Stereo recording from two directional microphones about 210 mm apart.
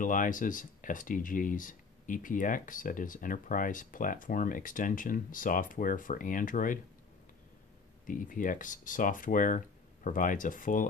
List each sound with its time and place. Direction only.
0.0 s speech: 40° left (ahead or behind)
8.1 s speech: 40° left (ahead or behind)